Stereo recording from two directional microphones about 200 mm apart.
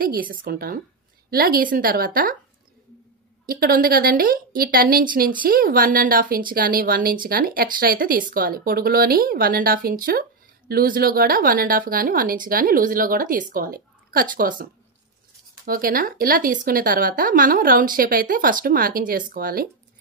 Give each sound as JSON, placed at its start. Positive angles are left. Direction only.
{"t": 0.0, "sound": "a woman's voice", "side_deg": -45}
{"t": 3.4, "sound": "a woman's voice", "side_deg": -50}